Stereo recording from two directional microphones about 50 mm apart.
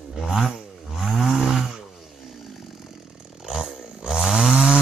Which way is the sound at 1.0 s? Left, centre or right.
Centre.